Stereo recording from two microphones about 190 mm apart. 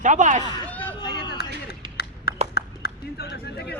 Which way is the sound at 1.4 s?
55° left (ahead or behind).